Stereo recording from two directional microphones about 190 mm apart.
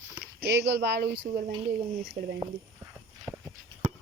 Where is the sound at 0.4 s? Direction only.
60° right (ahead or behind).